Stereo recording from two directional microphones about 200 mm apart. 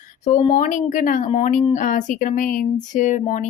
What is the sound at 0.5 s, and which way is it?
A woman's voice, 40° left (ahead or behind).